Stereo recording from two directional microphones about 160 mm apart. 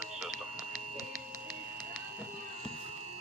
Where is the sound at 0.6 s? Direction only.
20° left (ahead or behind).